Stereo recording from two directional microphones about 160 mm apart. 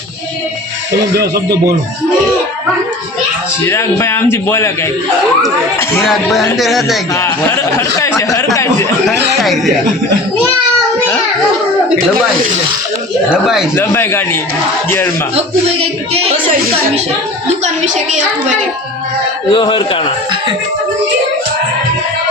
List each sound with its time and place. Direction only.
1.1 s speech: 80° right
3.7 s speech: 15° left (ahead or behind)
6.0 s speech: centre (ahead or behind)
7.1 s speech: 15° left (ahead or behind)
9.0 s a sound: centre (ahead or behind)
13.3 s speech: 5° right (ahead or behind)
13.7 s speech: 15° left (ahead or behind)
18.1 s a child's voice: 50° right (ahead or behind)
19.5 s a man's voice: 30° left (ahead or behind)